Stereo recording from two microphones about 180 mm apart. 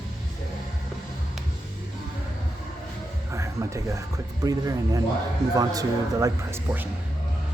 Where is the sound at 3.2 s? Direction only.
15° right (ahead or behind).